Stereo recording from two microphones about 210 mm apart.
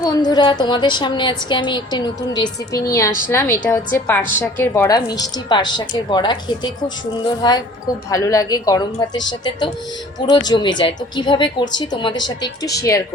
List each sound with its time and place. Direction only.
0.0 s a woman's voice: 20° left (ahead or behind)